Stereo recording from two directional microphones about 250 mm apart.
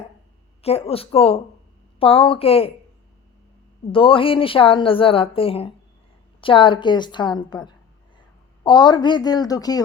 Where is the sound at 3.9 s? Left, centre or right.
Left.